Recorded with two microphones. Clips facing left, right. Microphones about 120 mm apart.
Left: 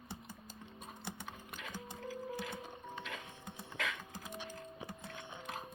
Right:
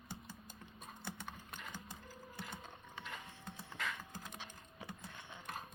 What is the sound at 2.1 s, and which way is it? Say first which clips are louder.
Music: left 11 dB; 90° left.